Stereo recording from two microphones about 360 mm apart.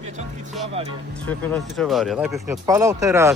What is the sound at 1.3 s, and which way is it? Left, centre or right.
Speech, centre.